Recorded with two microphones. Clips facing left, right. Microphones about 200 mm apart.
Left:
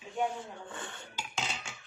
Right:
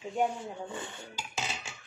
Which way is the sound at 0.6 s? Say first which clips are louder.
Right 4 dB; 20° right (ahead or behind).